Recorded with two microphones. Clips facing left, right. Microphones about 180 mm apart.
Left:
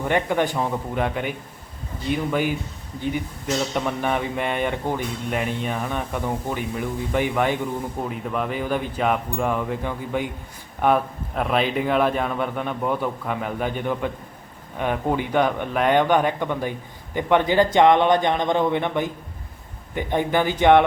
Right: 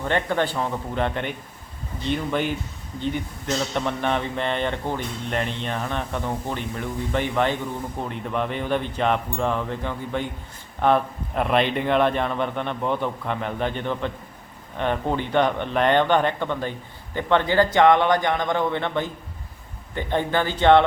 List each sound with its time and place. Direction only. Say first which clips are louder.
0.0 s a man's voice: left 2 dB; 10° left (ahead or behind)